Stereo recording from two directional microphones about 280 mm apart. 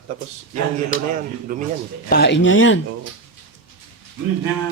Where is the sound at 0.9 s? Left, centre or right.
Left.